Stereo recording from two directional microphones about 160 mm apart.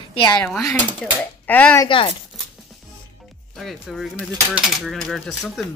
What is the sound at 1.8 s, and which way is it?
Speech, 35° left (ahead or behind).